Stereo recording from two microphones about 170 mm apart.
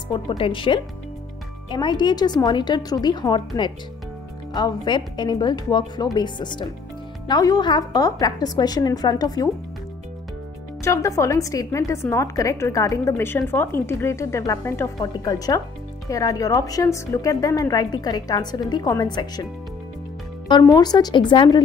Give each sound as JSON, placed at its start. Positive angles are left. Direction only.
{"t": 0.1, "sound": "a woman's voice", "side_deg": 30}
{"t": 10.8, "sound": "a woman's voice", "side_deg": 15}
{"t": 20.4, "sound": "a woman's voice", "side_deg": 25}